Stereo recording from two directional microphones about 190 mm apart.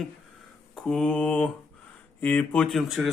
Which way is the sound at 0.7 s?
Centre (ahead or behind).